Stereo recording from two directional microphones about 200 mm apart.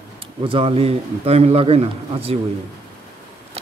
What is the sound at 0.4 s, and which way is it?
Speech, 25° right (ahead or behind).